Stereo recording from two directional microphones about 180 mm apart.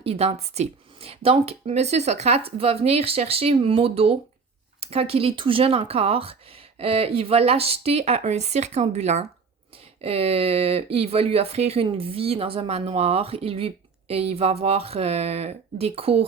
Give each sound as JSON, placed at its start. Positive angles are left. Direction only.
{"t": 0.0, "sound": "speech", "side_deg": -35}